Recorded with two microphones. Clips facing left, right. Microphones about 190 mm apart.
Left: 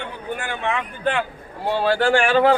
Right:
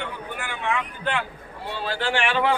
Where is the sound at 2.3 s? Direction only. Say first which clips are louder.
Left 7 dB; 35° left (ahead or behind).